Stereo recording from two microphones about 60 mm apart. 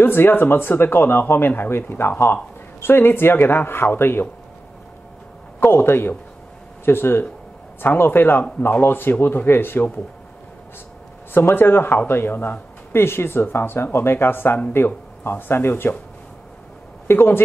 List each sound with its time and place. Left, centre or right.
0.0 s speech: left
5.6 s speech: left
11.3 s speech: left
17.1 s speech: left